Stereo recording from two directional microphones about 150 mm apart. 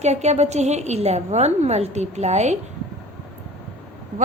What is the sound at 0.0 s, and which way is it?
A woman's voice, 50° right (ahead or behind).